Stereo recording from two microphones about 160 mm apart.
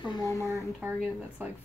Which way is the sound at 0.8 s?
10° right (ahead or behind).